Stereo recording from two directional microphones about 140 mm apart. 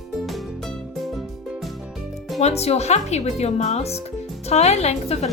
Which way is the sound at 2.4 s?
50° left (ahead or behind).